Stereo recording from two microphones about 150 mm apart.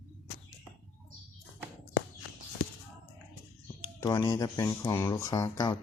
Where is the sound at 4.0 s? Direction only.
20° left (ahead or behind).